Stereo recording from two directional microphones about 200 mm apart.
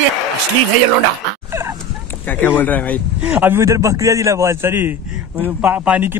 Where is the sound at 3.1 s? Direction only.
5° right (ahead or behind).